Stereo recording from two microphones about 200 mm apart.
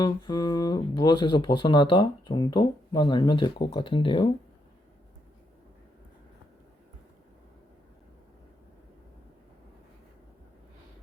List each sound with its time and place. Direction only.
0.0 s speech: 20° left (ahead or behind)